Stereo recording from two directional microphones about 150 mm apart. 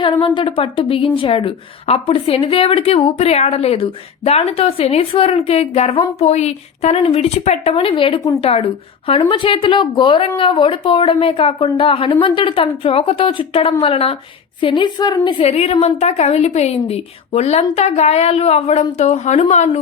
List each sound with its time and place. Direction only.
0.0 s a woman's voice: 35° left (ahead or behind)